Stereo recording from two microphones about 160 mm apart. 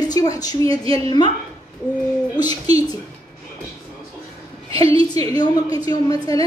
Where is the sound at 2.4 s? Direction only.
25° left (ahead or behind).